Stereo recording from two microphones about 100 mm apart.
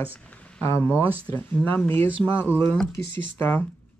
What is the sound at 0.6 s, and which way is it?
Speech, 25° left (ahead or behind).